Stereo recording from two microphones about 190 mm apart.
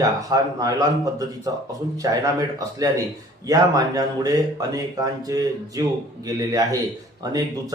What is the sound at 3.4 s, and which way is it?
A man's voice, 20° right (ahead or behind).